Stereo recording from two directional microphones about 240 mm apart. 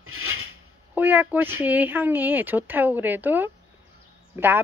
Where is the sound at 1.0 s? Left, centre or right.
Centre.